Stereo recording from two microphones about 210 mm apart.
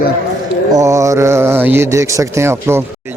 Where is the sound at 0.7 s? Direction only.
15° right (ahead or behind).